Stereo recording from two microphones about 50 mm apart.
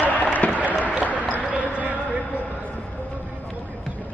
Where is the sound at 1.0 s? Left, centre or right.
Right.